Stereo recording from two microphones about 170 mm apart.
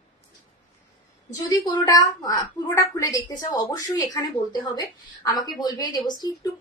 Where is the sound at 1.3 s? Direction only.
20° left (ahead or behind).